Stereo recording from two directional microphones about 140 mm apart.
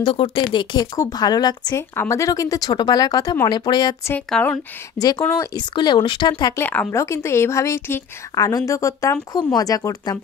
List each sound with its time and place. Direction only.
0.0 s a woman's voice: 35° left (ahead or behind)
4.3 s speech: 10° left (ahead or behind)
4.9 s a woman's voice: 25° left (ahead or behind)
5.6 s speech: 30° left (ahead or behind)
6.5 s a woman's voice: 10° left (ahead or behind)